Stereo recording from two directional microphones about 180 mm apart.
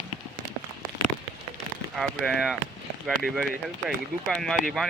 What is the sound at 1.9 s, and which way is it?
Speech, centre (ahead or behind).